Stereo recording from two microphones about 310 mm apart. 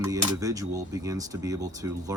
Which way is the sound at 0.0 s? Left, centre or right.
Centre.